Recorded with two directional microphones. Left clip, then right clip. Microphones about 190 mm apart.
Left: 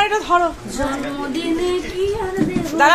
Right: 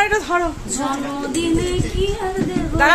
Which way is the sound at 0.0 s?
20° right (ahead or behind).